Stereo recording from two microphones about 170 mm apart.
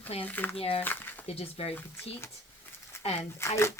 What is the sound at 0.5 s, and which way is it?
Speech, 35° left (ahead or behind).